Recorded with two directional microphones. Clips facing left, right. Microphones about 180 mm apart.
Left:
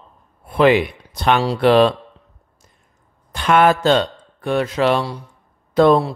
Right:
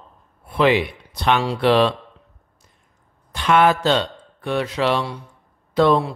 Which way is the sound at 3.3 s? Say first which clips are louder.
Left 2 dB; 45° left (ahead or behind).